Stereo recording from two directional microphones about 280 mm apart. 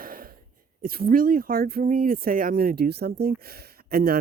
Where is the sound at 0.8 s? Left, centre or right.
Right.